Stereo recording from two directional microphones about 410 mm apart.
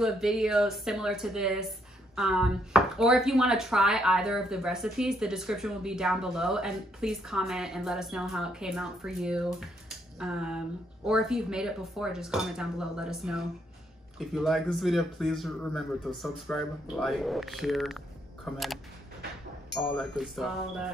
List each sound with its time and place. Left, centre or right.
0.0 s speech: centre